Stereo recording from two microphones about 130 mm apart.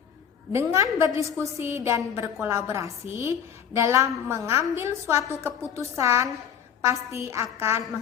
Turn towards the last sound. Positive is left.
turn(degrees=-20)  # may be behind; listen again after turning